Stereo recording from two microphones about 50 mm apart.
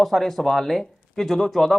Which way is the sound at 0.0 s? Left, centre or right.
Centre.